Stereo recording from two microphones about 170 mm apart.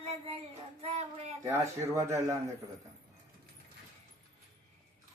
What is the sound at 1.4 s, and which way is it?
Speech, 15° right (ahead or behind).